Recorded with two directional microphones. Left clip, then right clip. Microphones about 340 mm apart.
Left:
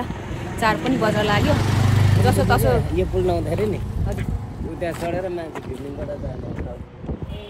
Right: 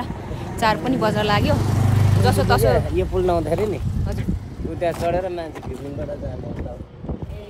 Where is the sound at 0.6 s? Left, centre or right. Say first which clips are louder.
Even; centre.